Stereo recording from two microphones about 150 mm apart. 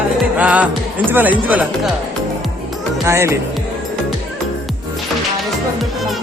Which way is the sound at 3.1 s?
20° right (ahead or behind).